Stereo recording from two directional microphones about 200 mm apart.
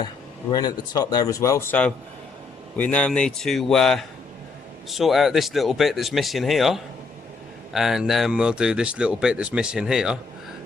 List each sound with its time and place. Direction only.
0.5 s speech: 20° left (ahead or behind); by 10.2 s 5° right (ahead or behind)